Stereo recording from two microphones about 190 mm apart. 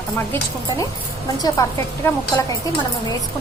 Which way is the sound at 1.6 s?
15° left (ahead or behind).